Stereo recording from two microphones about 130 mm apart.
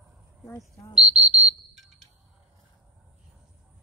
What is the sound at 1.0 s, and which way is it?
Whistle, 60° right (ahead or behind).